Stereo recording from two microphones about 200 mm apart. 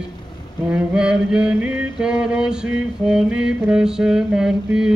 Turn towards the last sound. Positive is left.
turn(degrees=-5)  # may be behind; listen again after turning